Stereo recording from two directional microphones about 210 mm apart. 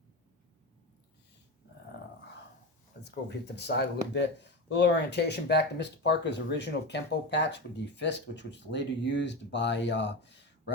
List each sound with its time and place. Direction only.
3.0 s speech: 55° left (ahead or behind)